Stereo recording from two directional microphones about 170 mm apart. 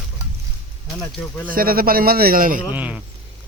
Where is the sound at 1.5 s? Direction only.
60° right (ahead or behind).